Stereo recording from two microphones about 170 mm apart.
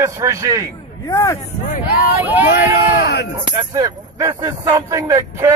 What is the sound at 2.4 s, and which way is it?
Speech, 65° left (ahead or behind).